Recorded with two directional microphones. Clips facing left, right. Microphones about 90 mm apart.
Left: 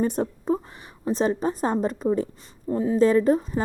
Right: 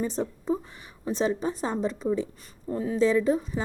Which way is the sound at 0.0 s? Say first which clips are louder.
Left 5 dB; 50° left (ahead or behind).